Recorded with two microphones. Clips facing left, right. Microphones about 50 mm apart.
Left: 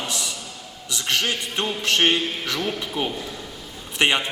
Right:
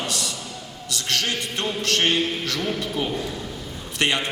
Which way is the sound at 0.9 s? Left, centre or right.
Centre.